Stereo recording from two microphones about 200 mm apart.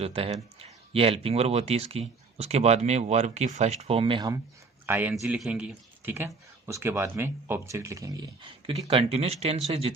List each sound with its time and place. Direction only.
0.0 s speech: 30° right (ahead or behind)
4.9 s a man's voice: 10° right (ahead or behind); by 9.6 s 30° right (ahead or behind)